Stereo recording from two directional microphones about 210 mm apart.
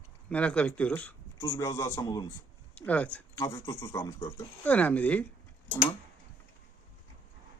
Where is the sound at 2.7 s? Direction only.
5° left (ahead or behind).